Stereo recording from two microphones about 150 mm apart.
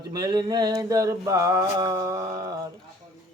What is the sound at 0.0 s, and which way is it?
Mantra, 25° right (ahead or behind).